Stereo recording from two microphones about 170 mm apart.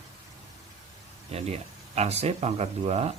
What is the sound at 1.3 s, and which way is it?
Speech, 35° right (ahead or behind).